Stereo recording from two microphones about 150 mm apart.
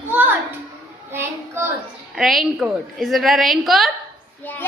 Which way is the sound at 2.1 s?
Centre (ahead or behind).